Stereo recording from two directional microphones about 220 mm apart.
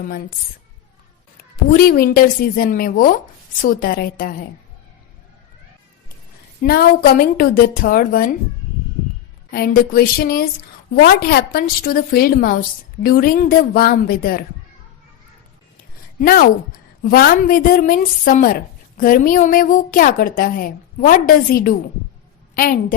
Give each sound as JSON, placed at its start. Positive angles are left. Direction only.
{"t": 1.7, "sound": "a woman's voice", "side_deg": 45}
{"t": 6.6, "sound": "a woman's voice", "side_deg": 45}
{"t": 9.5, "sound": "a woman's voice", "side_deg": 45}
{"t": 16.2, "sound": "a woman's voice", "side_deg": 40}